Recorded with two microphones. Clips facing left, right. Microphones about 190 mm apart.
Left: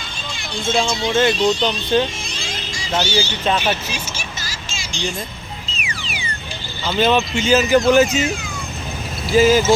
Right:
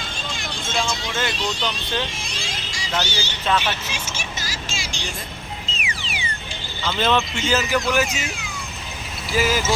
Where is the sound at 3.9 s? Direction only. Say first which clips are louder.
Left 2 dB; 20° right (ahead or behind).